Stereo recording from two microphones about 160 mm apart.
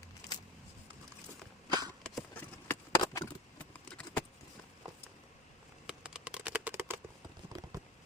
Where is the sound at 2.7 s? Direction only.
20° left (ahead or behind).